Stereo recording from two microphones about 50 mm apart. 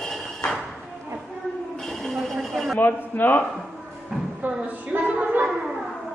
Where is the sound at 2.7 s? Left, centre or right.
Left.